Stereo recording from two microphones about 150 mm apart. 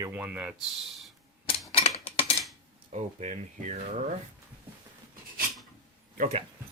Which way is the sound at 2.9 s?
50° right (ahead or behind).